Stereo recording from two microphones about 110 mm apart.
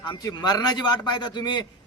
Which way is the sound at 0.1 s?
35° left (ahead or behind).